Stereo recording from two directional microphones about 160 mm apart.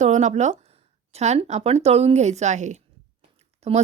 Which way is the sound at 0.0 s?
50° right (ahead or behind).